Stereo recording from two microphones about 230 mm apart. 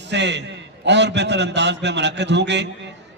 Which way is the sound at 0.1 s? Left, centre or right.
Right.